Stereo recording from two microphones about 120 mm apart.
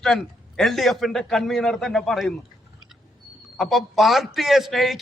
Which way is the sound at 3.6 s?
Centre (ahead or behind).